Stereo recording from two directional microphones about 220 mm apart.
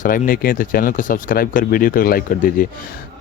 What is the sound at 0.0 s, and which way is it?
A man's voice, 40° left (ahead or behind).